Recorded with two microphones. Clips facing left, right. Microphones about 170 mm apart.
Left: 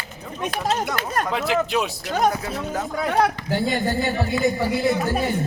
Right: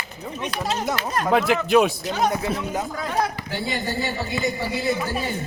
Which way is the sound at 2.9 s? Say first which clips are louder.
Left 9 dB; 65° left (ahead or behind).